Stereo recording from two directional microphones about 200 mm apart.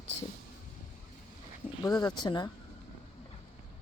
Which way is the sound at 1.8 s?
20° left (ahead or behind).